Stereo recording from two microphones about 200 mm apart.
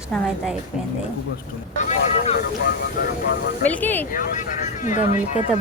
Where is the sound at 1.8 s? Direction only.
35° left (ahead or behind).